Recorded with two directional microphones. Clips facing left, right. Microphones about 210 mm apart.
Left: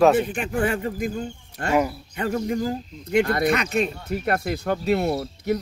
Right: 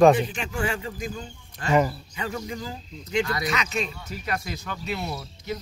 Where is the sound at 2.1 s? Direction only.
55° left (ahead or behind).